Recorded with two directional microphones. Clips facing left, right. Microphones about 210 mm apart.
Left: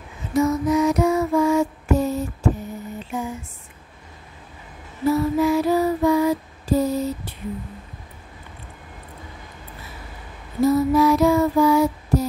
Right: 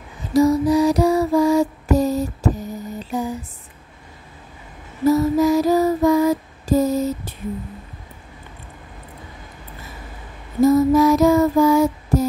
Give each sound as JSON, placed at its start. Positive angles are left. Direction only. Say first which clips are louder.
{"t": 0.3, "sound": "music", "louder": "right 4 dB", "side_deg": -35}
{"t": 5.0, "sound": "lullaby", "louder": "right 3 dB", "side_deg": -40}
{"t": 10.6, "sound": "female singing", "louder": "right 3 dB", "side_deg": -45}